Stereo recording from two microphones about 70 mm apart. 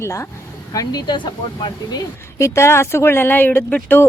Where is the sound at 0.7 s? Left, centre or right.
Left.